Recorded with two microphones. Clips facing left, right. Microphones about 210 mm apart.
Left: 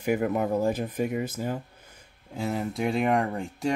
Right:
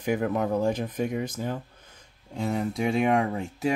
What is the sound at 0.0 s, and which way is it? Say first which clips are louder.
Speech: left 1 dB; 5° left (ahead or behind).